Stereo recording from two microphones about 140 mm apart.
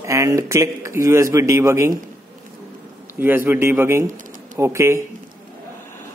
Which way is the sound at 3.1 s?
15° right (ahead or behind).